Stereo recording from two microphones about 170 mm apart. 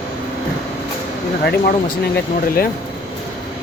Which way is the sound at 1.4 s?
70° left (ahead or behind).